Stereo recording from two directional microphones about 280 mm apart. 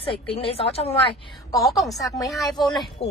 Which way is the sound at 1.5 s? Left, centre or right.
Centre.